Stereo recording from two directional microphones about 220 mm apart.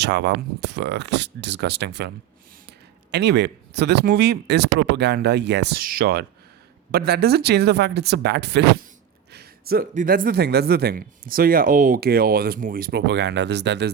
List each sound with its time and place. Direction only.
0.0 s speech: 50° right (ahead or behind)